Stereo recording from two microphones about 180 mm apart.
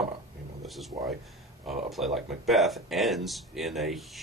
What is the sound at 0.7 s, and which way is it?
Speech, centre (ahead or behind).